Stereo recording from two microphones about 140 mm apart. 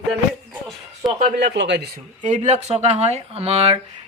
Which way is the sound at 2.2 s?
60° right (ahead or behind).